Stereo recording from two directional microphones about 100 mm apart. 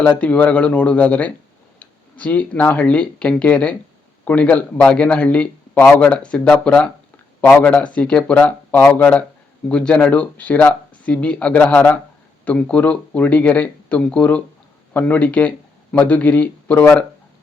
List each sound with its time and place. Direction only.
0.0 s a man's voice: 15° left (ahead or behind)